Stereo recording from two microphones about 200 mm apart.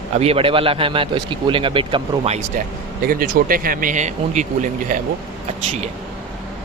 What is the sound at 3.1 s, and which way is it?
Speech, 45° right (ahead or behind).